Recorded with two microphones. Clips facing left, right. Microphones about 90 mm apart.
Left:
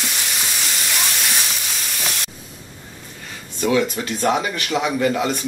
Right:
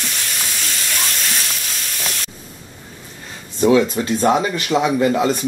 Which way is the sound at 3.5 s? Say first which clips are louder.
Right 5 dB; 30° right (ahead or behind).